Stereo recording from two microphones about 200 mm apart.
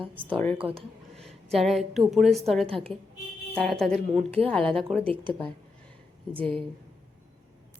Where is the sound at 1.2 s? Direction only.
Centre (ahead or behind).